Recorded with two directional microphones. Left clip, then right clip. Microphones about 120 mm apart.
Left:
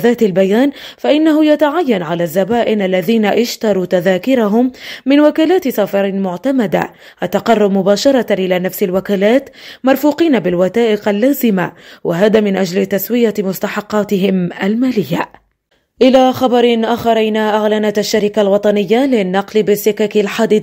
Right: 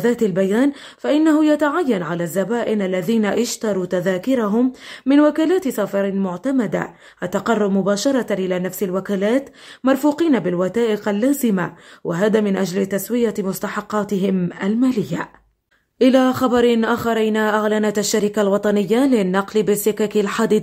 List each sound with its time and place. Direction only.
0.0 s a woman's voice: 25° left (ahead or behind)
16.0 s a man's voice: 10° left (ahead or behind)